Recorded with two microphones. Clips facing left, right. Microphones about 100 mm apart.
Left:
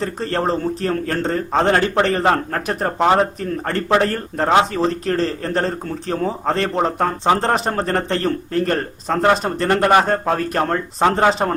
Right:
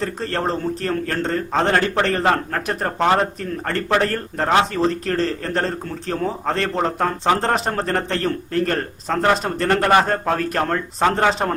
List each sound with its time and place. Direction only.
0.0 s a man's voice: 5° left (ahead or behind)